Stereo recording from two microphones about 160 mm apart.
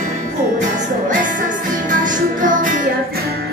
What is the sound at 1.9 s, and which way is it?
Music, 55° right (ahead or behind).